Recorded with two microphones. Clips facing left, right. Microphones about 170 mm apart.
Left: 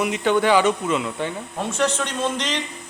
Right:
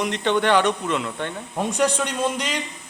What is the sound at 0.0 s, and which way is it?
Speech, 5° left (ahead or behind).